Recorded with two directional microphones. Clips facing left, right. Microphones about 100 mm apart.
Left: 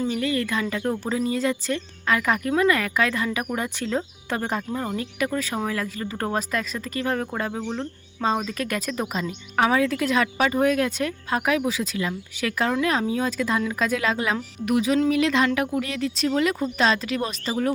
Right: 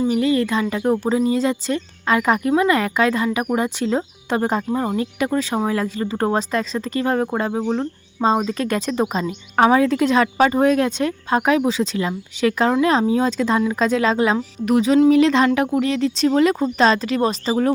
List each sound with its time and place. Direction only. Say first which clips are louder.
0.0 s speech: right 7 dB; 20° right (ahead or behind)